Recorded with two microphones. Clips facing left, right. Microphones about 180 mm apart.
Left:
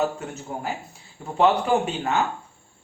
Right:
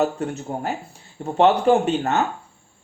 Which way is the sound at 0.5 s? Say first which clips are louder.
Right 4 dB; 40° right (ahead or behind).